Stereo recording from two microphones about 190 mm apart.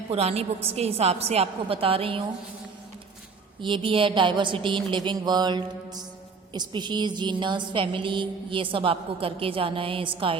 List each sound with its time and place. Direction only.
0.1 s a woman's voice: 30° right (ahead or behind)
3.6 s a woman's voice: 25° right (ahead or behind)